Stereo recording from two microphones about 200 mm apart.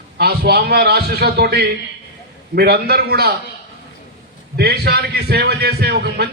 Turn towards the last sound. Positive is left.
turn(degrees=-55)  # may be behind; listen again after turning